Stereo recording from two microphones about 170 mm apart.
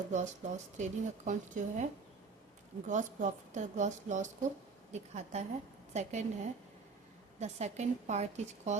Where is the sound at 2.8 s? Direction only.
45° right (ahead or behind).